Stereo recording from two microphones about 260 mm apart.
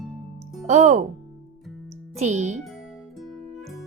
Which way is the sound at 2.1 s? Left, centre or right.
Right.